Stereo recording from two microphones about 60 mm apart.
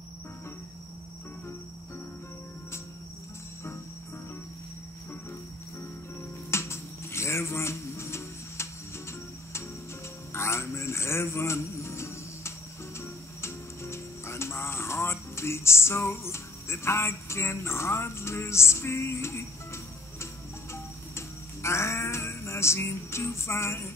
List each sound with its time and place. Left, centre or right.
6.5 s a sound: left
10.3 s music: left
21.6 s music: left